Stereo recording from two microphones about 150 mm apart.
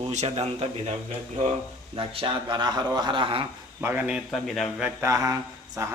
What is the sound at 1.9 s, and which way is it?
A man's voice, 35° right (ahead or behind).